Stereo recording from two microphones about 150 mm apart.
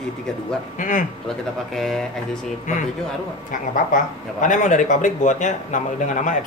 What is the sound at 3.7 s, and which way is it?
Speech, 60° left (ahead or behind).